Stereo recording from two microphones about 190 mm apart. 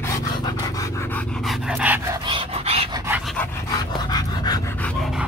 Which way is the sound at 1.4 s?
5° right (ahead or behind).